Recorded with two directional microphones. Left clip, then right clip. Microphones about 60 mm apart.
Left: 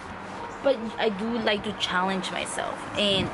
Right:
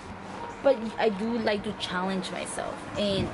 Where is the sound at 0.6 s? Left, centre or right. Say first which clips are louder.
Right 1 dB; right.